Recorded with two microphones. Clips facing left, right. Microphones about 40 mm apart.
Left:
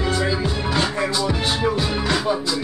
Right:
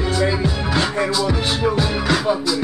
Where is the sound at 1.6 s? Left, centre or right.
Centre.